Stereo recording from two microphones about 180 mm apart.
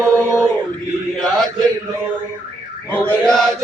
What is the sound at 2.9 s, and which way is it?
Chant, 5° left (ahead or behind).